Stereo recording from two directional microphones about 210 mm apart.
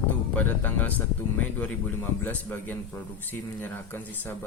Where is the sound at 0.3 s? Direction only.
10° left (ahead or behind).